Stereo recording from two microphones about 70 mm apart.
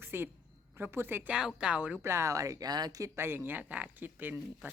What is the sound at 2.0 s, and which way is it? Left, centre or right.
Speech, right.